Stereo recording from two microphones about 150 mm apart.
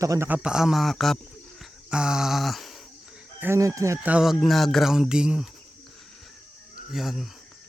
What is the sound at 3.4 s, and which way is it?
Chicken, 20° right (ahead or behind).